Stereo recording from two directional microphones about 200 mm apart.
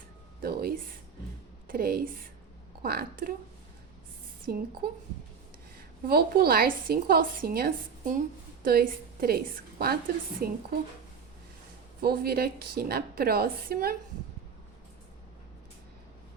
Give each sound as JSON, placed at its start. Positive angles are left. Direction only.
{"t": 0.4, "sound": "a woman's voice", "side_deg": -50}
{"t": 4.4, "sound": "a woman's voice", "side_deg": -45}
{"t": 6.1, "sound": "a woman's voice", "side_deg": -50}
{"t": 12.0, "sound": "a woman's voice", "side_deg": -50}